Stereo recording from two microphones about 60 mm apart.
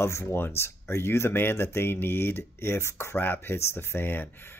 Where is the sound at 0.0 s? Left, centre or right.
Left.